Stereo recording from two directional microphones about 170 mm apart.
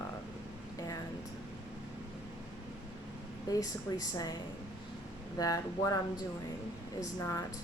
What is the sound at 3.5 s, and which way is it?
Speech, 20° left (ahead or behind).